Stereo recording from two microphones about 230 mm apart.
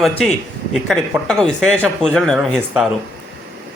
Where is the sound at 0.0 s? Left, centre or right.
Centre.